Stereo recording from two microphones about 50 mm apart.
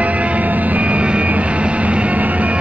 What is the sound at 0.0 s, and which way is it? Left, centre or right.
Vehicle, right.